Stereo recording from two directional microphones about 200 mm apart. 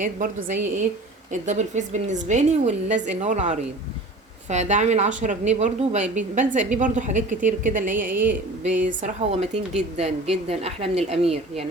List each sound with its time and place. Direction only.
0.0 s speech: 40° right (ahead or behind)
8.1 s a sound: 10° right (ahead or behind)
8.6 s speech: 40° right (ahead or behind)